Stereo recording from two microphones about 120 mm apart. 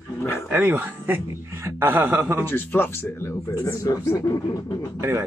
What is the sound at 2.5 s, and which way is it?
Speech, 15° left (ahead or behind).